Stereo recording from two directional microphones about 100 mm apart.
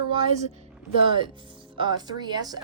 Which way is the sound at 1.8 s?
45° right (ahead or behind).